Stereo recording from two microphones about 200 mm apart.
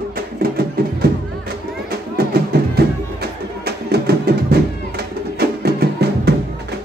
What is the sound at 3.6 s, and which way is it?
Music, 55° right (ahead or behind).